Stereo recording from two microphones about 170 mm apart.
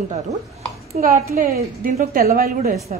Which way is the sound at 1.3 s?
60° right (ahead or behind).